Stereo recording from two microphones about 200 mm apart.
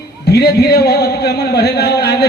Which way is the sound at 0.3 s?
55° left (ahead or behind).